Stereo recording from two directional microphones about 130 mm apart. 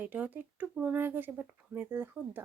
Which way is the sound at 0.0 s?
15° right (ahead or behind).